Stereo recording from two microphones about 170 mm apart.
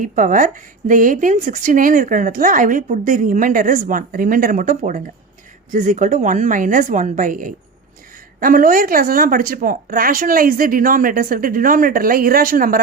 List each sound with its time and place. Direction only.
0.0 s speech: 50° right (ahead or behind)